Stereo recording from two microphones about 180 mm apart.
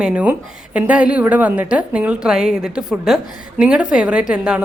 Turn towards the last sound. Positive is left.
turn(degrees=-5)  # may be behind; listen again after turning